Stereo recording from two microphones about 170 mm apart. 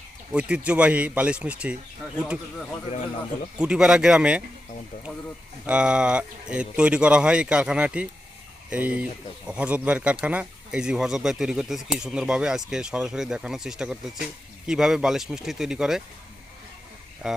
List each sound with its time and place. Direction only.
0.3 s speech: 5° right (ahead or behind)
3.6 s speech: 5° right (ahead or behind)
5.6 s speech: 5° right (ahead or behind)
17.2 s speech: 5° right (ahead or behind)